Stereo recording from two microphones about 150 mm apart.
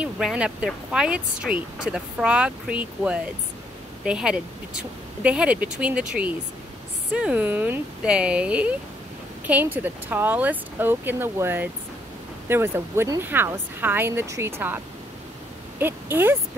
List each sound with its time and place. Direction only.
0.0 s speech: 5° right (ahead or behind)
15.8 s speech: 15° right (ahead or behind)